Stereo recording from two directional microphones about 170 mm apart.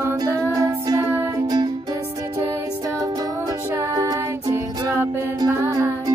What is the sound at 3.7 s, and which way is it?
Music, 20° right (ahead or behind).